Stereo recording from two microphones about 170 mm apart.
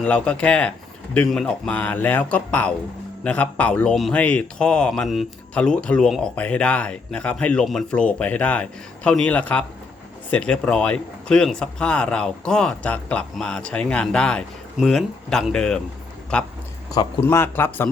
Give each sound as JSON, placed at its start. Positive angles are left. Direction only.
{"t": 0.0, "sound": "speech", "side_deg": 5}